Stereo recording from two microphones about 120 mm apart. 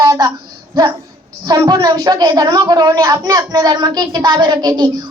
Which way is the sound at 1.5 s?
35° right (ahead or behind).